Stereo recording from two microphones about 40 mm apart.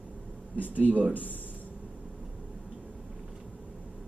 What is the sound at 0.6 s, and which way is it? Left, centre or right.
Speech, left.